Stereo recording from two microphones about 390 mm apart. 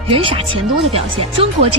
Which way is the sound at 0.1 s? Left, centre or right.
Centre.